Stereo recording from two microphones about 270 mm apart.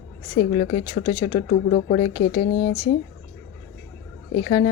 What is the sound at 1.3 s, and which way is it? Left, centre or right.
Speech, left.